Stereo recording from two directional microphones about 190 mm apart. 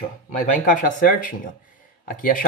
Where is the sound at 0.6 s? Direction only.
45° left (ahead or behind).